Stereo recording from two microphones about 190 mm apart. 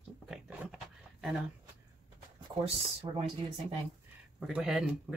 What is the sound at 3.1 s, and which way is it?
Speech, 25° right (ahead or behind).